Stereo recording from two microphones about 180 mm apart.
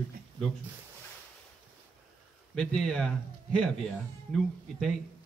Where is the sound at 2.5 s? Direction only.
5° left (ahead or behind).